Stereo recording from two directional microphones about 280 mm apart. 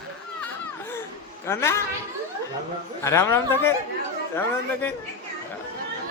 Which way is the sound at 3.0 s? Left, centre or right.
Centre.